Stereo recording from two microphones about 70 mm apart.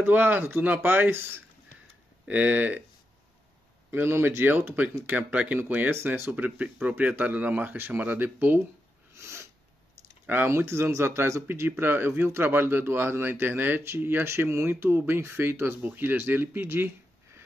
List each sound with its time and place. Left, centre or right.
0.0 s speech: right
2.2 s speech: right
3.9 s speech: right
6.3 s speech: right
9.1 s snort: right
10.2 s speech: right
10.5 s speech: right